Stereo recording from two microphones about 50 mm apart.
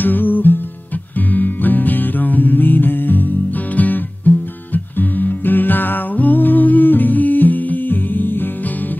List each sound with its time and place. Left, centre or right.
0.0 s music: left